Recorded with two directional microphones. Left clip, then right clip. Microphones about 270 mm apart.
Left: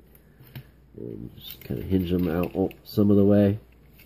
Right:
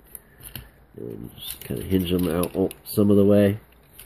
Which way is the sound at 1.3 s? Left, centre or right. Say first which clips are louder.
Right 3 dB; centre.